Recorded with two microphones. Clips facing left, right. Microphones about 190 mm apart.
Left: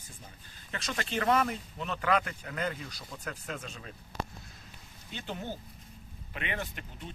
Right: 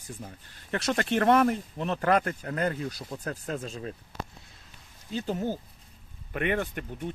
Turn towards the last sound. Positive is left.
turn(degrees=-55)  # may be behind; listen again after turning